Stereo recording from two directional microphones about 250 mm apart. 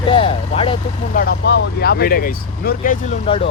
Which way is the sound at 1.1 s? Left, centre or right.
Left.